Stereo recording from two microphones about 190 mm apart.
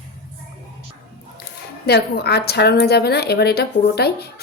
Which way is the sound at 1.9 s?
60° left (ahead or behind).